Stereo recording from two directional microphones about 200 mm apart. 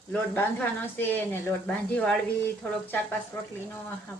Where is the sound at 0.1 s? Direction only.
10° left (ahead or behind).